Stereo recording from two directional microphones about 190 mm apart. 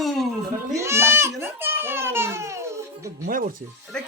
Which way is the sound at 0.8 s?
15° right (ahead or behind).